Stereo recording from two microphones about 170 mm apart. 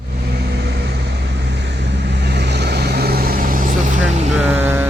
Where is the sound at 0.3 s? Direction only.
75° right (ahead or behind).